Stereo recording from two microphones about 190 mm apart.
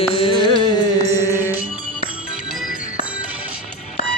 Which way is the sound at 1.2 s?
10° right (ahead or behind).